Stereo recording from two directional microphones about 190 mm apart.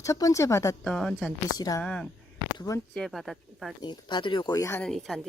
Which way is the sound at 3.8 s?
25° left (ahead or behind).